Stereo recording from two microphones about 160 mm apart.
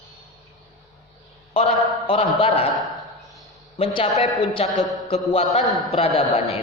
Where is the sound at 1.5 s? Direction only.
35° left (ahead or behind).